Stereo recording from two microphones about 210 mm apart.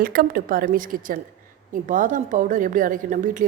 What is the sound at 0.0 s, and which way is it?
A woman's voice, 45° right (ahead or behind).